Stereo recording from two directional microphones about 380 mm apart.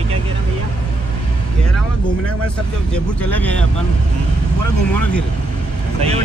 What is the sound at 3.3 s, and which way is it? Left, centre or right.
Speech, centre.